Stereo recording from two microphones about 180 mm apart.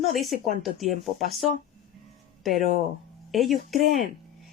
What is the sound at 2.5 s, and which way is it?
Speech, 55° right (ahead or behind).